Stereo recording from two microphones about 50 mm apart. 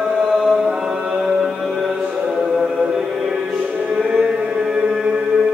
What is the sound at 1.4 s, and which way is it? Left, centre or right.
Music, centre.